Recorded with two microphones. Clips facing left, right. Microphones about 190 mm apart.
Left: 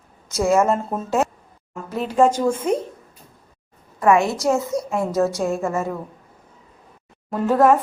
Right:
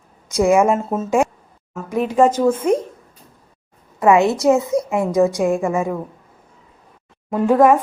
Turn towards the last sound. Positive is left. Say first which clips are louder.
# right 3 dB
turn(degrees=-10)  # may be behind; listen again after turning